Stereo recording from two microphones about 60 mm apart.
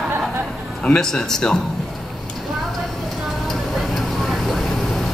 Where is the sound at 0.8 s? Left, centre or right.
Centre.